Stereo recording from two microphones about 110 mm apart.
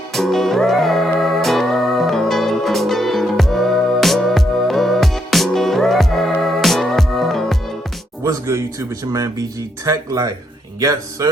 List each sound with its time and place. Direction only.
0.1 s music: centre (ahead or behind)
8.2 s speech: 30° right (ahead or behind)